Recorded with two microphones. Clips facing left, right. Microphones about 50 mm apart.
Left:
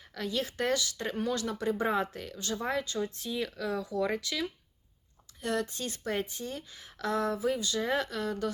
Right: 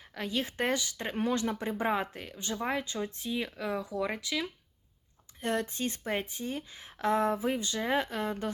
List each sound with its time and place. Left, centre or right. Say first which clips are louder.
0.1 s speech: even; centre
5.4 s speech: right 1 dB; right